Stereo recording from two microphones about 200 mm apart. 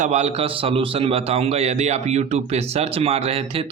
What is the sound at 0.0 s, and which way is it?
A man's voice, 35° right (ahead or behind).